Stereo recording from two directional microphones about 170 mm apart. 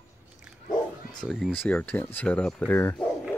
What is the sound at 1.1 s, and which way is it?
Speech, centre (ahead or behind).